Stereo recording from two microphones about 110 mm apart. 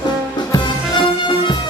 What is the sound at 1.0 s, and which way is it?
Music, 45° left (ahead or behind).